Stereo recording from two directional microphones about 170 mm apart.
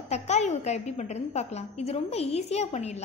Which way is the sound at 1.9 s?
35° left (ahead or behind).